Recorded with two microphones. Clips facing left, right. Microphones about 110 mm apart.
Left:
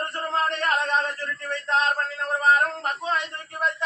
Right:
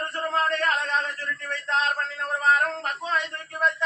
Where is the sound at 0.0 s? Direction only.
25° left (ahead or behind).